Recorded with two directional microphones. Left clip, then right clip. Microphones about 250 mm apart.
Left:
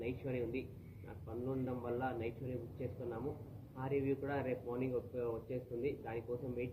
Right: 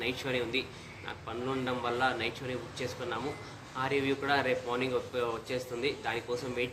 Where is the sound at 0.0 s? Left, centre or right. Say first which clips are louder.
Right 8 dB; centre.